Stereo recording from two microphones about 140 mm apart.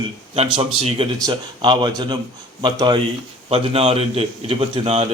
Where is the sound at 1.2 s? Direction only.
30° right (ahead or behind).